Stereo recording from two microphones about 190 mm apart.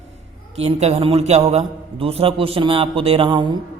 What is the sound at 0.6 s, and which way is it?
A man's voice, 35° right (ahead or behind).